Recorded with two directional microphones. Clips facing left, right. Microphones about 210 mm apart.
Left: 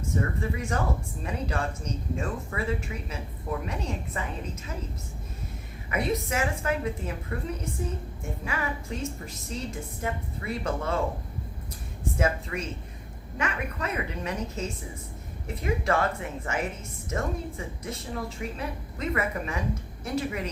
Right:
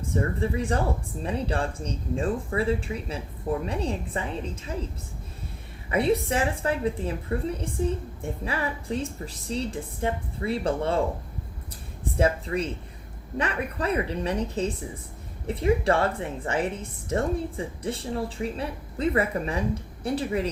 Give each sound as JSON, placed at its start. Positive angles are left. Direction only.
{"t": 0.1, "sound": "a woman's voice", "side_deg": -30}
{"t": 5.9, "sound": "a woman's voice", "side_deg": -30}
{"t": 12.1, "sound": "a woman's voice", "side_deg": -30}